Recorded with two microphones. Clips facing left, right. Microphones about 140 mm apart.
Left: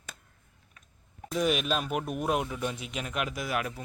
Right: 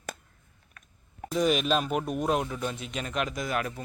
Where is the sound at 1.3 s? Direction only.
5° left (ahead or behind).